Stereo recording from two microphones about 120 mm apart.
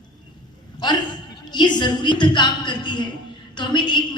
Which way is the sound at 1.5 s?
40° left (ahead or behind).